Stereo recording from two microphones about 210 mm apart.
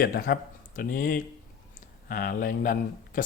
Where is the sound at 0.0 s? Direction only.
45° left (ahead or behind).